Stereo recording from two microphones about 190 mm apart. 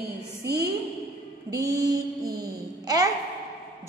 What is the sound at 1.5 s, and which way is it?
A woman's voice, 20° right (ahead or behind).